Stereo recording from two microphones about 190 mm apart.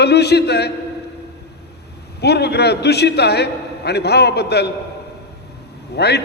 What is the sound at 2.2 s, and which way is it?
A man's voice, 60° left (ahead or behind).